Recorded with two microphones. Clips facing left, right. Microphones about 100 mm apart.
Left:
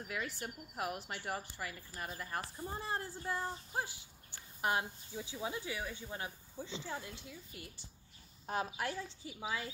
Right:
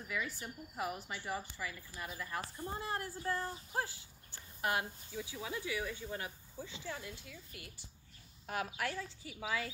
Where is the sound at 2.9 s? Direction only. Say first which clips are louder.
Right 1 dB; 25° left (ahead or behind).